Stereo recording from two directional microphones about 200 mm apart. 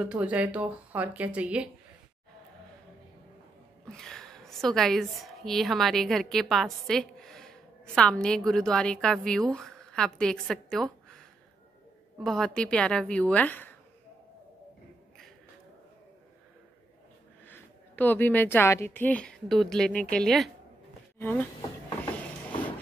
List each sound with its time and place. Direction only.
0.0 s speech: 5° right (ahead or behind)
3.8 s a woman's voice: centre (ahead or behind)
17.5 s a woman's voice: 10° left (ahead or behind)